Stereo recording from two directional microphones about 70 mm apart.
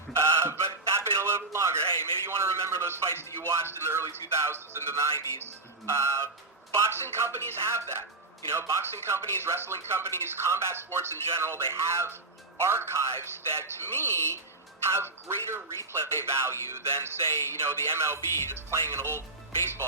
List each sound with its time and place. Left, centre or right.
0.1 s a sound: right
1.9 s a man's voice: left
2.2 s speech: right
5.8 s music: right
6.7 s speech: right